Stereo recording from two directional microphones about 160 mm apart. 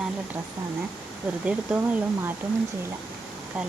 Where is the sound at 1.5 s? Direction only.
10° right (ahead or behind).